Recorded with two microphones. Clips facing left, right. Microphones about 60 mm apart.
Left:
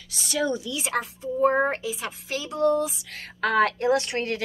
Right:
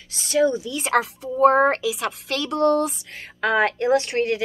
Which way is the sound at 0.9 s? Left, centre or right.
Right.